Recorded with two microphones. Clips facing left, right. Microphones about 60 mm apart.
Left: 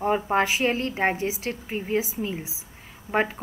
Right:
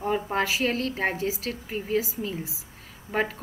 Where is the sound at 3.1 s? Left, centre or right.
Centre.